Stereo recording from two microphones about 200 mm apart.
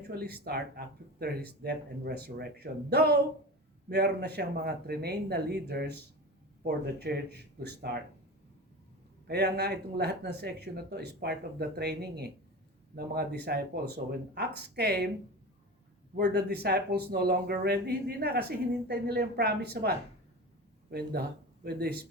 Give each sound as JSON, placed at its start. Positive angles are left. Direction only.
{"t": 0.1, "sound": "speech", "side_deg": -50}
{"t": 9.2, "sound": "speech", "side_deg": -55}
{"t": 16.1, "sound": "speech", "side_deg": -55}
{"t": 20.9, "sound": "speech", "side_deg": -50}